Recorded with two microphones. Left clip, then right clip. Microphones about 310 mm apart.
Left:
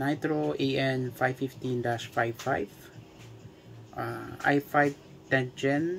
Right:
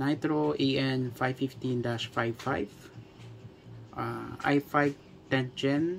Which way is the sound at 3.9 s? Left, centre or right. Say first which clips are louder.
Even; right.